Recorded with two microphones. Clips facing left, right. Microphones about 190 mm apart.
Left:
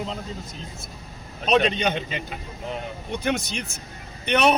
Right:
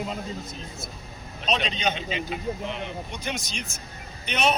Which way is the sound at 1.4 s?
55° left (ahead or behind).